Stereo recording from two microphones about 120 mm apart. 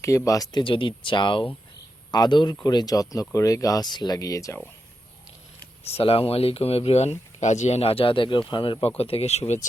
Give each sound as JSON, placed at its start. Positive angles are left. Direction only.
{"t": 0.0, "sound": "speech", "side_deg": 25}
{"t": 0.6, "sound": "speech", "side_deg": 45}
{"t": 5.9, "sound": "speech", "side_deg": 55}